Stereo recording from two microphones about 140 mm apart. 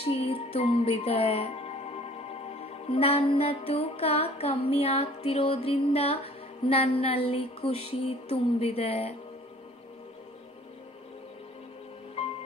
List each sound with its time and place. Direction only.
0.0 s music: 45° left (ahead or behind)